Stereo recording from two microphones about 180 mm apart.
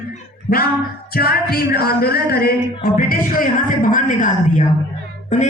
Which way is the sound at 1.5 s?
60° left (ahead or behind).